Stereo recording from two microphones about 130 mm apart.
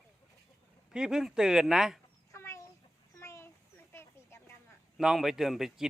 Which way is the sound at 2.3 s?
20° left (ahead or behind).